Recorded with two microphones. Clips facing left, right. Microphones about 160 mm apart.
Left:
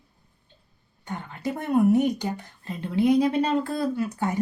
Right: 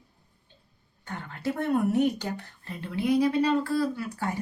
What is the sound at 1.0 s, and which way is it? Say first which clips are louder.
Speech: left 2 dB; 15° left (ahead or behind).